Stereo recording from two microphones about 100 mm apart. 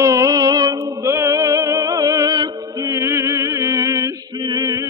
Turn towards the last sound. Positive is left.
turn(degrees=-40)  # may be behind; listen again after turning